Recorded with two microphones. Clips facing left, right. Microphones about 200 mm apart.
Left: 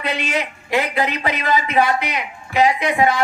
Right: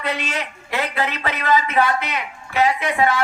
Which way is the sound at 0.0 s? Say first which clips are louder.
Left 3 dB; 15° left (ahead or behind).